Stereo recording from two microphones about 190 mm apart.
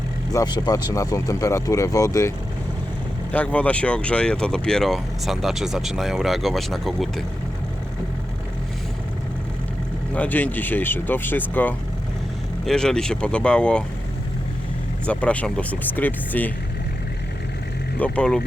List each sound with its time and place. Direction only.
0.3 s speech: 20° left (ahead or behind)
3.3 s speech: 5° left (ahead or behind)
10.2 s speech: 10° left (ahead or behind)
15.0 s speech: 5° left (ahead or behind)
18.0 s speech: 5° left (ahead or behind)